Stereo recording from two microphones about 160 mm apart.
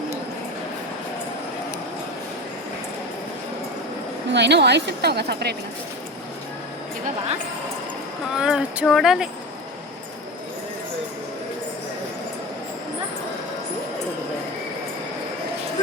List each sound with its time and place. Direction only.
4.3 s a woman's voice: 90° right
8.4 s speech: 5° right (ahead or behind)